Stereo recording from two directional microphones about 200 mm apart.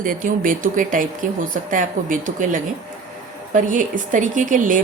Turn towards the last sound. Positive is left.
turn(degrees=-40)  # may be behind; listen again after turning